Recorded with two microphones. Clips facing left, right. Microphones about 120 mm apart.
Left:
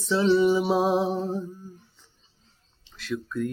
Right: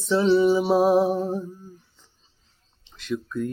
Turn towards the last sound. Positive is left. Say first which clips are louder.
# right 2 dB
turn(degrees=-20)  # may be behind; listen again after turning